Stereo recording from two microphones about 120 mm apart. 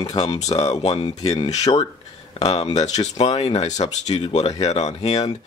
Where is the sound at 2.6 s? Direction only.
65° left (ahead or behind).